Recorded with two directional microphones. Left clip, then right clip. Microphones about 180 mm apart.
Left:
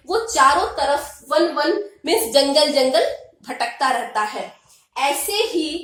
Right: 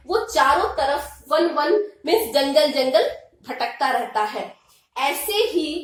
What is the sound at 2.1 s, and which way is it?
A woman's voice, 20° left (ahead or behind).